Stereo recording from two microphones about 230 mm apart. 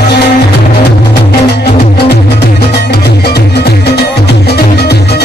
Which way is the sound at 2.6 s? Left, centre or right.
Left.